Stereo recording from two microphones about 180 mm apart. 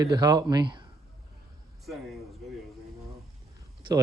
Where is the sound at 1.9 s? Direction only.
Centre (ahead or behind).